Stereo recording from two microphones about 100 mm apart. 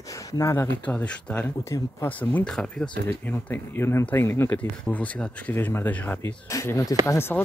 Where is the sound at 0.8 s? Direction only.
15° left (ahead or behind).